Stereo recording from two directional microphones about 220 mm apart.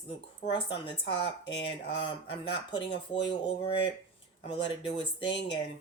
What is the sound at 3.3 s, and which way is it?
Speech, 20° left (ahead or behind).